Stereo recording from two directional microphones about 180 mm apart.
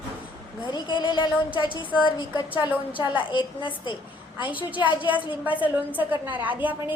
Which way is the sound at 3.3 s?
25° left (ahead or behind).